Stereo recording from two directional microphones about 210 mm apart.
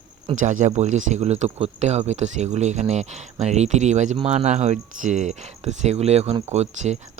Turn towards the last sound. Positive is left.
turn(degrees=-30)  # may be behind; listen again after turning